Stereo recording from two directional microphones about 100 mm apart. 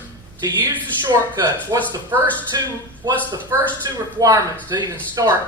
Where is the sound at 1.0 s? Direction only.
45° right (ahead or behind).